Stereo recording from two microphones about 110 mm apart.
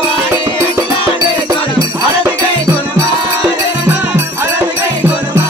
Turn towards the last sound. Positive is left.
turn(degrees=-20)  # may be behind; listen again after turning